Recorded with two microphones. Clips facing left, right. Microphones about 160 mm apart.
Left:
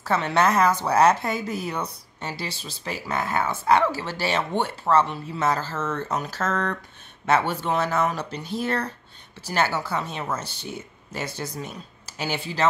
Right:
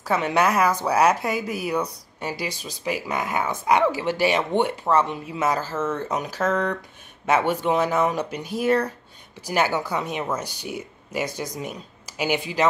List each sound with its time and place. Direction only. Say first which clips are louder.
0.0 s a woman's voice: even; 10° right (ahead or behind)